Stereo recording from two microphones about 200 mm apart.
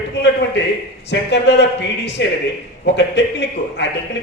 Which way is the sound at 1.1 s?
60° left (ahead or behind).